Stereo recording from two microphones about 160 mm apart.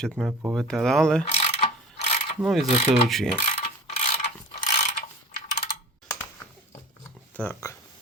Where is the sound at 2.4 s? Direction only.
5° right (ahead or behind).